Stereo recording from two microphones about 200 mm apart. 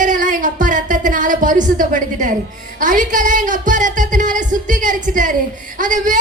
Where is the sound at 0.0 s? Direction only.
40° right (ahead or behind).